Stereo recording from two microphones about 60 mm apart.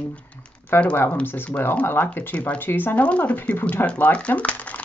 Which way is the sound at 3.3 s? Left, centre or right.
Left.